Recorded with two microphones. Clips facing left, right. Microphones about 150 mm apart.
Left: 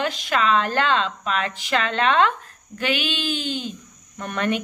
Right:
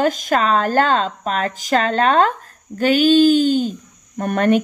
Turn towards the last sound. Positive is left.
turn(degrees=-45)  # may be behind; listen again after turning